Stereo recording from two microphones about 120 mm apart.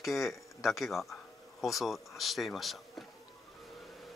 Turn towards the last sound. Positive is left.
turn(degrees=0)  # may be behind; listen again after turning